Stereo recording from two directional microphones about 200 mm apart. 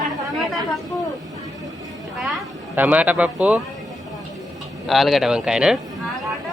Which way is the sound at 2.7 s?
10° right (ahead or behind).